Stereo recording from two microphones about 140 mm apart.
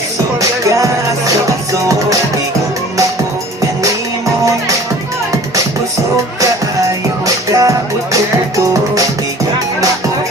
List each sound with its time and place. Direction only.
7.5 s music: 25° right (ahead or behind)